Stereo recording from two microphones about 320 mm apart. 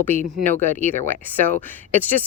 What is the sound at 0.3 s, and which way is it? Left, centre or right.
Speech, centre.